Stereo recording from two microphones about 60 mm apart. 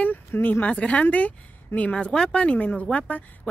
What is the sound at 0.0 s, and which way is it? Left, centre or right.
Speech, left.